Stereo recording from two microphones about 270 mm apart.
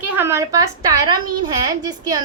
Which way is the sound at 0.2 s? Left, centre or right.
Centre.